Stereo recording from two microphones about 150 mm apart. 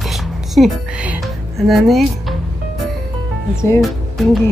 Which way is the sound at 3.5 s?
20° left (ahead or behind).